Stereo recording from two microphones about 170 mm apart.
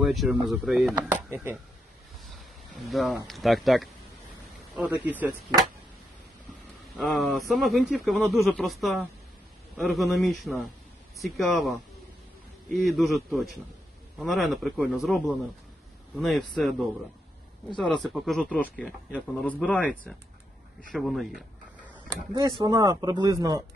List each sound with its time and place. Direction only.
0.0 s speech: centre (ahead or behind)
0.9 s speech: 15° right (ahead or behind)
2.7 s speech: centre (ahead or behind)
7.0 s speech: centre (ahead or behind)
22.6 s speech: 25° right (ahead or behind)